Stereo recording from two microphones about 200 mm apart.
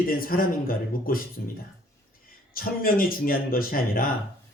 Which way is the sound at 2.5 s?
45° left (ahead or behind).